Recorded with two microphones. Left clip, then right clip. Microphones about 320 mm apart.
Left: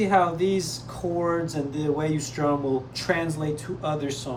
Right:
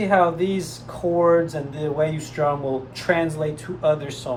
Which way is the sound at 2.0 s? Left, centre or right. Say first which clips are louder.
Right 5 dB; centre.